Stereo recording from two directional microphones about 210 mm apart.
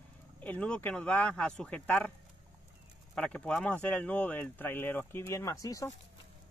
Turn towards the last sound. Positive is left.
turn(degrees=15)  # may be behind; listen again after turning